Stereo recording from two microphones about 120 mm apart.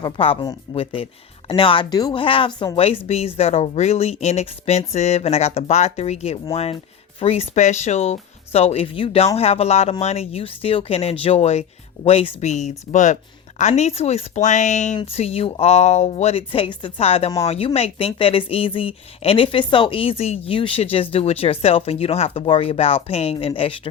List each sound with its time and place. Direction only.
0.0 s a woman's voice: 45° left (ahead or behind)
1.5 s a woman's voice: 45° left (ahead or behind)
2.2 s a woman's voice: 45° left (ahead or behind); by 13.1 s 90° left
13.6 s speech: 70° left (ahead or behind); by 14.9 s 90° left
15.0 s a woman's voice: 55° left (ahead or behind)